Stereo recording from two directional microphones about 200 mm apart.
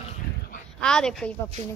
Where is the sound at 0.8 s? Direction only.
5° left (ahead or behind).